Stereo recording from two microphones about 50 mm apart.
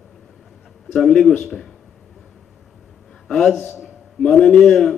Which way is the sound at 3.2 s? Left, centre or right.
Centre.